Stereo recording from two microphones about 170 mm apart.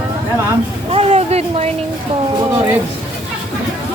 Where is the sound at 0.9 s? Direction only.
35° right (ahead or behind).